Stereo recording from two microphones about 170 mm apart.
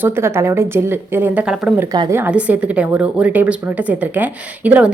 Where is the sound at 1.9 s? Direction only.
20° right (ahead or behind).